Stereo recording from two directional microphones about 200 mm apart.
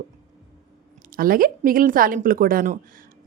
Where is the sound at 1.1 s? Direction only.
45° right (ahead or behind).